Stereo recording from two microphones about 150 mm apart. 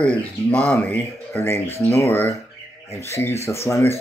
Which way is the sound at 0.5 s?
10° left (ahead or behind).